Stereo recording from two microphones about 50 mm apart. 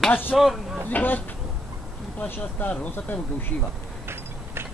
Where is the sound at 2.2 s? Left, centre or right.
Left.